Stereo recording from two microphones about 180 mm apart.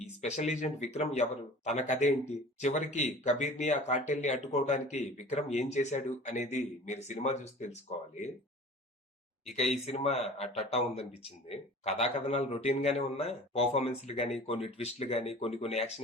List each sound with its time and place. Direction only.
0.2 s speech: 40° left (ahead or behind)
9.6 s speech: 35° left (ahead or behind)